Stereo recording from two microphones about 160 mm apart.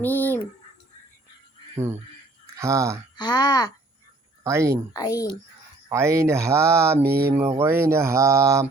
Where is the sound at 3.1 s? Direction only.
25° left (ahead or behind).